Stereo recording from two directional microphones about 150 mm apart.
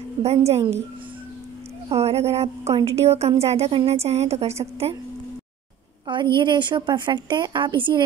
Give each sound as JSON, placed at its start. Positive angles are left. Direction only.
{"t": 0.2, "sound": "a woman's voice", "side_deg": -45}
{"t": 1.9, "sound": "a woman's voice", "side_deg": -45}
{"t": 6.3, "sound": "a woman's voice", "side_deg": -30}